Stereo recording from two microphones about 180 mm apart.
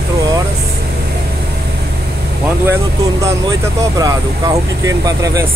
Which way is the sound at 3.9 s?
20° right (ahead or behind).